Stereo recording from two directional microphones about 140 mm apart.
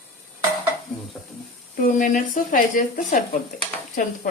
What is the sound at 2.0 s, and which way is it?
Speech, 70° left (ahead or behind).